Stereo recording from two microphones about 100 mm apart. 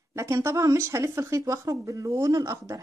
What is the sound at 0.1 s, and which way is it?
Speech, 25° right (ahead or behind).